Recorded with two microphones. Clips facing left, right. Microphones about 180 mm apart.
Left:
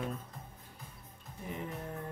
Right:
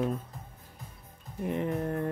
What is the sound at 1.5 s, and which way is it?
Music, 70° right (ahead or behind).